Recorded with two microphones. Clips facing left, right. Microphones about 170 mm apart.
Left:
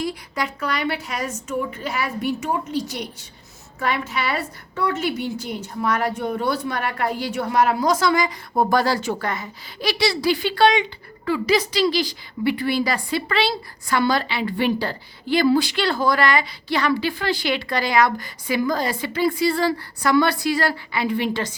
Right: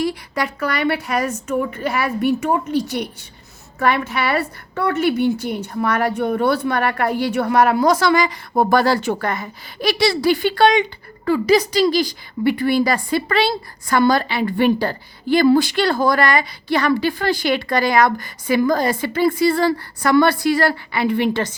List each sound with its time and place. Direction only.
0.0 s a woman's voice: 65° right (ahead or behind)